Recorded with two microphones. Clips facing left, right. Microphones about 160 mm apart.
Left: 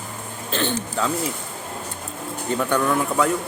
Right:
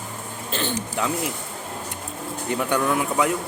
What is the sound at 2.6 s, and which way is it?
Speech, 15° right (ahead or behind).